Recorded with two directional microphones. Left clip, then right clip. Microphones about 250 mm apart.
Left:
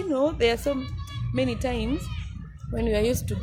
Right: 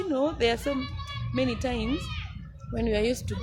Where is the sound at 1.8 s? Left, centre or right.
Right.